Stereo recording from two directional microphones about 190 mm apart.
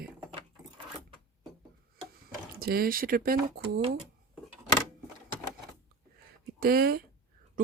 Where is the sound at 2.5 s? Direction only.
55° right (ahead or behind).